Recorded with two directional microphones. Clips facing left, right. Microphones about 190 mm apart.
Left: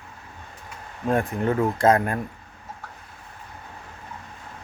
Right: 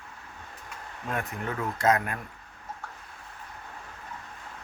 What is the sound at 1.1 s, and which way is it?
Speech, 30° left (ahead or behind).